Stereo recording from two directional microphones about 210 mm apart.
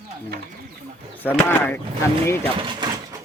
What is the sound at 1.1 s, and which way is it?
Speech, 10° left (ahead or behind).